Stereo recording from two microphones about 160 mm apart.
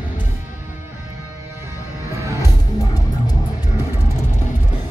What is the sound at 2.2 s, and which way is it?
Music, 20° right (ahead or behind).